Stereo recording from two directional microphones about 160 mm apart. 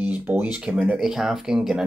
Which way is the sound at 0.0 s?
10° right (ahead or behind).